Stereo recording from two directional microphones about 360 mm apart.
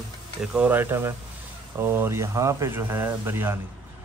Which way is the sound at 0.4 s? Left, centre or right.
Centre.